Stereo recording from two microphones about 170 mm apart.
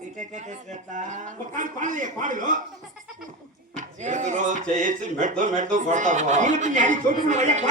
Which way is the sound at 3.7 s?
45° right (ahead or behind).